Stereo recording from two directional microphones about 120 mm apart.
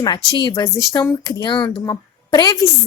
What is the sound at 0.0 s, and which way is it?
Speech, 35° left (ahead or behind).